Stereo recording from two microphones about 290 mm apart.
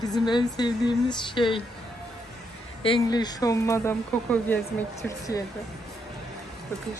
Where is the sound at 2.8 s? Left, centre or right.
Centre.